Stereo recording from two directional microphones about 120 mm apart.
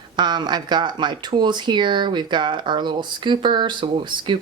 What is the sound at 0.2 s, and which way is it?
Speech, 35° right (ahead or behind).